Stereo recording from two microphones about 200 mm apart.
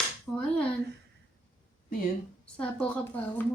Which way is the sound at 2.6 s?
5° left (ahead or behind).